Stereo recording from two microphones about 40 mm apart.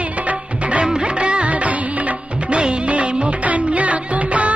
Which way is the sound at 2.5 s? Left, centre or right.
Right.